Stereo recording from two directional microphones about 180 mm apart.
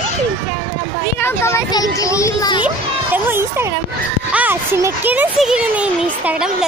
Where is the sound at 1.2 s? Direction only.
15° left (ahead or behind).